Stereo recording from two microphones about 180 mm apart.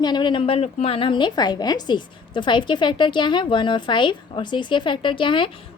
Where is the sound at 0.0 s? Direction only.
25° left (ahead or behind).